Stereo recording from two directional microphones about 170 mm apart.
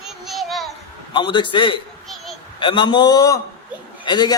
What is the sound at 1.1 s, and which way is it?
A man's voice, 30° left (ahead or behind).